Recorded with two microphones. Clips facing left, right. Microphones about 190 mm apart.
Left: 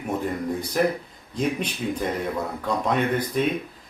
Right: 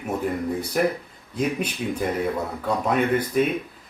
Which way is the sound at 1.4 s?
5° right (ahead or behind).